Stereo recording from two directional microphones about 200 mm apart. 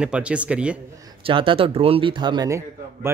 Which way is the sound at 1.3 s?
25° right (ahead or behind).